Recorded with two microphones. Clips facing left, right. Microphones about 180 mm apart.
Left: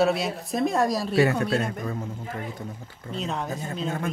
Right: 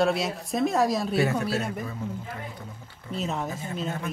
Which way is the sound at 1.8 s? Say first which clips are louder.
Left 2 dB; 45° left (ahead or behind).